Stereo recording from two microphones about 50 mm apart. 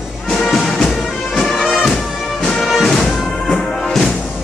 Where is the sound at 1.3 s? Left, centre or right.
Centre.